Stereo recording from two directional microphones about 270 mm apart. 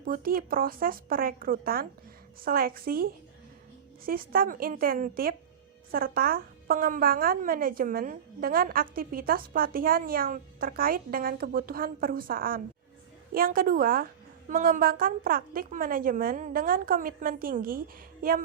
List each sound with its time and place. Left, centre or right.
0.0 s a woman's voice: right